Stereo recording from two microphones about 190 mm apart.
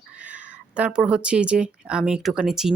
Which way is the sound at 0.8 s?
5° right (ahead or behind).